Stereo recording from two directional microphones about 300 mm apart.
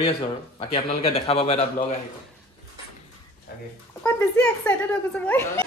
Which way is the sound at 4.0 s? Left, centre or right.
Centre.